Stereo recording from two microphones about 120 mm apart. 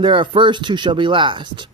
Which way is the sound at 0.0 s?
45° right (ahead or behind).